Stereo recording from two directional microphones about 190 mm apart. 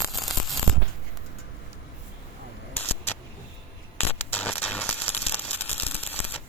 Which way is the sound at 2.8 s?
10° left (ahead or behind).